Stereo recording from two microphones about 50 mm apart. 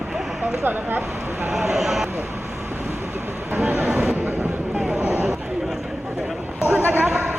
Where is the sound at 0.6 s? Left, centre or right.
Right.